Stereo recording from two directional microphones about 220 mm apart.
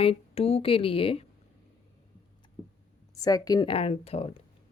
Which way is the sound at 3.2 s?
15° left (ahead or behind).